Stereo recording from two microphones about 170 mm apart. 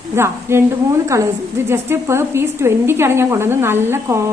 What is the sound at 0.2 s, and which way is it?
A woman's voice, 15° right (ahead or behind).